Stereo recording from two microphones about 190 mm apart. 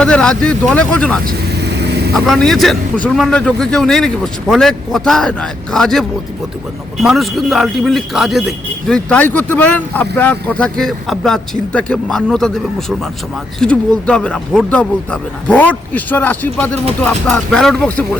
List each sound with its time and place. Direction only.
0.0 s a man's voice: 5° left (ahead or behind)
1.6 s vehicle: 60° right (ahead or behind)
2.1 s a man's voice: centre (ahead or behind)